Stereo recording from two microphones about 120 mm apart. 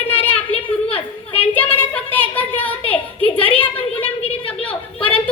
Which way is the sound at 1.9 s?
15° left (ahead or behind).